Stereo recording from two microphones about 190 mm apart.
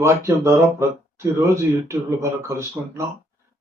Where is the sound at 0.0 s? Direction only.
15° right (ahead or behind).